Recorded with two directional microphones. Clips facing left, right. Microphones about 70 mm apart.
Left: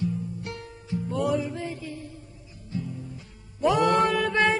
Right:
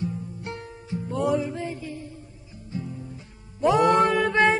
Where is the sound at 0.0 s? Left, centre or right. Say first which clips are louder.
Left 1 dB; right.